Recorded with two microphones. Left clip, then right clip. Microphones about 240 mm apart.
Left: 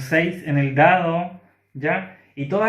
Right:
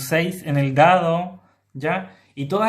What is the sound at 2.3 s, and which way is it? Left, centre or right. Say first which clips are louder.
Speech: even; right.